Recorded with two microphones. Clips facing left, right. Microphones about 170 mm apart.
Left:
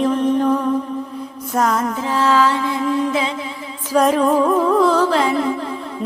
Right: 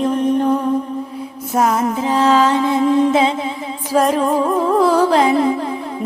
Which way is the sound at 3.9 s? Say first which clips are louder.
Left 1 dB; centre (ahead or behind).